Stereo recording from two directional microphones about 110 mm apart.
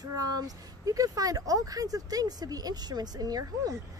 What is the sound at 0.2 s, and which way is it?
Speech, 35° right (ahead or behind).